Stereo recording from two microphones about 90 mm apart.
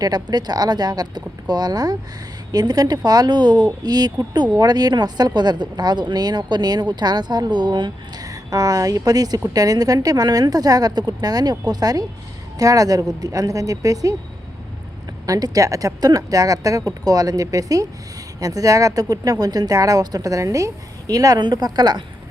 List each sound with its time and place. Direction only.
0.0 s speech: 50° right (ahead or behind)
15.3 s speech: 45° right (ahead or behind)